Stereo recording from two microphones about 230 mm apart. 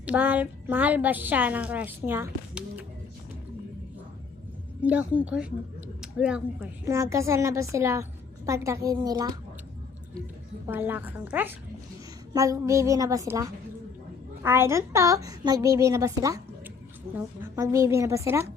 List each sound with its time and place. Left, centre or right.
0.0 s a woman's voice: centre
4.8 s a woman's voice: centre
10.7 s a woman's voice: centre